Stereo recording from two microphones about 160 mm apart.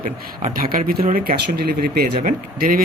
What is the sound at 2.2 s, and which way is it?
Speech, 60° right (ahead or behind).